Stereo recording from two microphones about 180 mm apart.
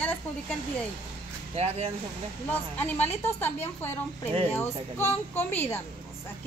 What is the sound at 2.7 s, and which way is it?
Speech, 10° left (ahead or behind).